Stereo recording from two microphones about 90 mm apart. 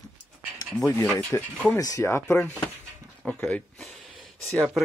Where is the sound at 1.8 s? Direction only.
40° left (ahead or behind).